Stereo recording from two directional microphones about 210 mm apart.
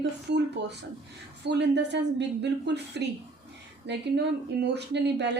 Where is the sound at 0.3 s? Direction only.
55° right (ahead or behind).